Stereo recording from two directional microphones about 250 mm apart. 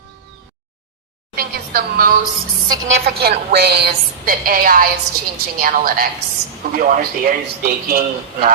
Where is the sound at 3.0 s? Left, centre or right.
Right.